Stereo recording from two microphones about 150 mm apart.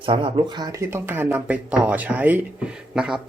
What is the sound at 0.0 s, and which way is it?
Speech, 35° right (ahead or behind).